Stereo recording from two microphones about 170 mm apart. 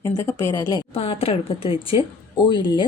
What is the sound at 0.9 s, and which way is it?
A woman's voice, 35° left (ahead or behind).